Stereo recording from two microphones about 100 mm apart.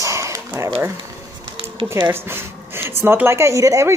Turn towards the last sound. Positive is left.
turn(degrees=-30)  # may be behind; listen again after turning